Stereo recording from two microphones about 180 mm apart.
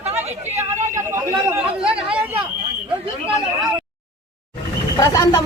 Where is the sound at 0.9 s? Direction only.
15° right (ahead or behind).